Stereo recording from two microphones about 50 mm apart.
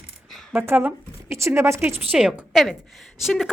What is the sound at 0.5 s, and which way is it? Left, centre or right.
Speech, right.